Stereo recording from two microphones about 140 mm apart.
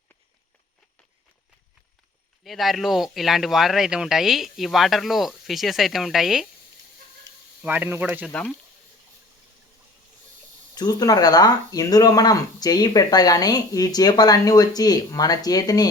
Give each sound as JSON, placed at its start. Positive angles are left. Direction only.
{"t": 2.4, "sound": "speech", "side_deg": 0}
{"t": 7.6, "sound": "speech", "side_deg": -15}
{"t": 8.3, "sound": "speech", "side_deg": 10}
{"t": 10.8, "sound": "speech", "side_deg": 30}